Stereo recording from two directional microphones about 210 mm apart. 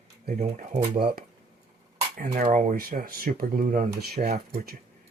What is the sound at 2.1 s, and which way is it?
Speech, 40° right (ahead or behind).